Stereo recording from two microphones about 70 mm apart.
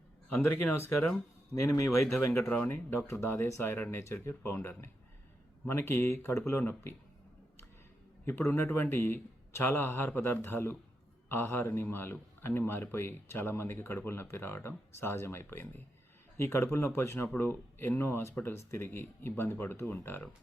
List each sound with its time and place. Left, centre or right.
0.3 s a man's voice: left
2.5 s a man's voice: left
8.3 s a man's voice: left